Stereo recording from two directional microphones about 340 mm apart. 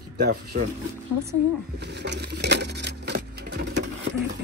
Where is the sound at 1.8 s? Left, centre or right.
Right.